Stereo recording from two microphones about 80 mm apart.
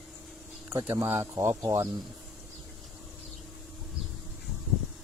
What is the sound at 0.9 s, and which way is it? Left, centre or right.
Speech, right.